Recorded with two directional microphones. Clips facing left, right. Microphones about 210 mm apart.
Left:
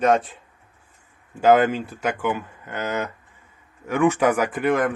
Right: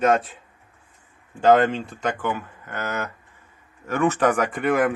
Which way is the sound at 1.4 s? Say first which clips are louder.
Even; 5° left (ahead or behind).